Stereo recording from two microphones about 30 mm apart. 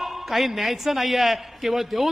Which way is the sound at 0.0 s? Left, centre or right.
Centre.